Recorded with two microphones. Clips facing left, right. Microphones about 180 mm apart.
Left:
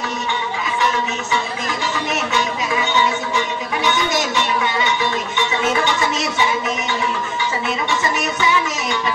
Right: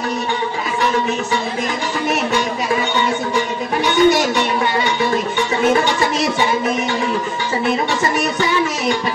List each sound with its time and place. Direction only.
3.3 s music: 35° right (ahead or behind)
5.7 s music: 35° right (ahead or behind)
8.0 s music: 35° right (ahead or behind)